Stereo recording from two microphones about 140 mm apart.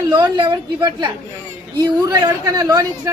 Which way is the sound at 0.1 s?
30° right (ahead or behind).